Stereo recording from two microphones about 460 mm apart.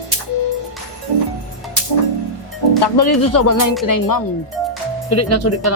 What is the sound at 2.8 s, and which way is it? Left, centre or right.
Speech, left.